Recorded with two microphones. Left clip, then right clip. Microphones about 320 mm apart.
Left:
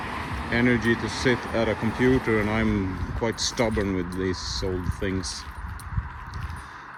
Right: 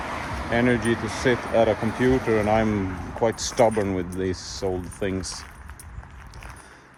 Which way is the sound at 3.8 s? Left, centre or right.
Right.